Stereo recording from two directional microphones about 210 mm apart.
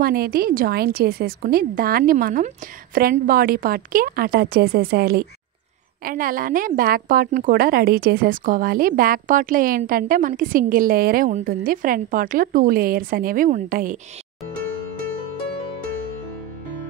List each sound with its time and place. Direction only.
0.0 s a woman's voice: 45° right (ahead or behind)